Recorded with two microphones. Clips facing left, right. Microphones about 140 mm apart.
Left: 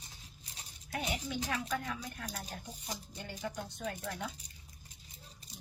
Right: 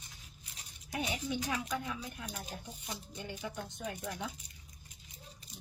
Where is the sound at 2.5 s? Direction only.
35° left (ahead or behind).